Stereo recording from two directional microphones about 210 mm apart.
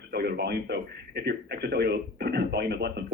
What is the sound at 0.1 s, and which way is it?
Speech, 50° right (ahead or behind).